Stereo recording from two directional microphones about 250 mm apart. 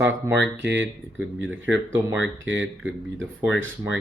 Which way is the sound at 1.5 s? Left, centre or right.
Centre.